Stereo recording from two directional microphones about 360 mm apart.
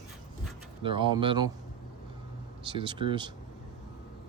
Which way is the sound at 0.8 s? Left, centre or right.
Centre.